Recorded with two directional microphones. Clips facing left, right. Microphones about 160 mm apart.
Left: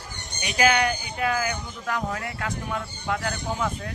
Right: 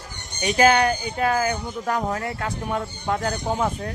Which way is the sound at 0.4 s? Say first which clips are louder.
Right 5 dB; 40° right (ahead or behind).